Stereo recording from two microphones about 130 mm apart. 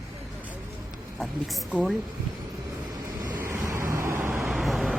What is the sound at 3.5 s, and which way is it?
Vehicle, 20° right (ahead or behind).